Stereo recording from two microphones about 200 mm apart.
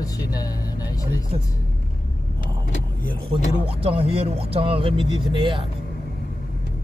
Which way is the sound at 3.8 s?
30° right (ahead or behind).